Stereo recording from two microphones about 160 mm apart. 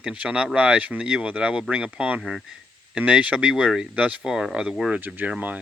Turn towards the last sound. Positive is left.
turn(degrees=-10)  # may be behind; listen again after turning